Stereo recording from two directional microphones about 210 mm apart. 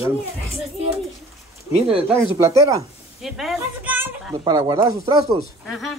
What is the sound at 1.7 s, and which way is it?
Speech, 25° right (ahead or behind).